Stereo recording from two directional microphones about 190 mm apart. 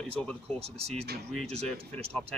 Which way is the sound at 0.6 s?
30° right (ahead or behind).